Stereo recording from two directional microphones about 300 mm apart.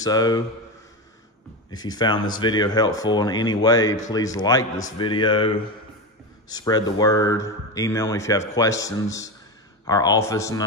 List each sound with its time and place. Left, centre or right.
0.0 s speech: centre
1.8 s speech: centre
6.5 s speech: centre